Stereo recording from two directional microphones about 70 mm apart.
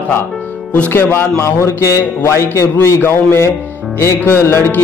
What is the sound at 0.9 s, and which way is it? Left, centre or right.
Speech, left.